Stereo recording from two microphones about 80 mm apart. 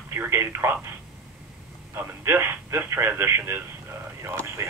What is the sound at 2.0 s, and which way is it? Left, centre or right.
Speech, right.